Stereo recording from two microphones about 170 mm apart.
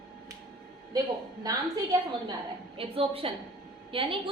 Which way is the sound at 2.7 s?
35° right (ahead or behind).